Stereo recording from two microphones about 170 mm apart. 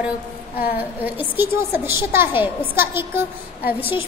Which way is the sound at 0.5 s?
60° left (ahead or behind).